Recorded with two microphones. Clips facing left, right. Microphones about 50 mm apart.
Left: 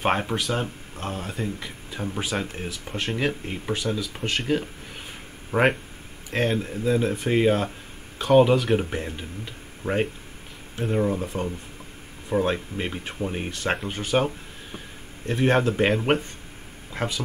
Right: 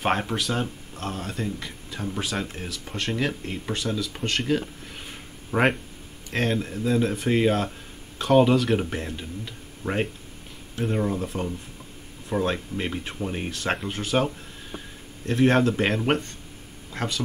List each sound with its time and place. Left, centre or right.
0.0 s speech: centre
9.8 s speech: left
10.8 s speech: centre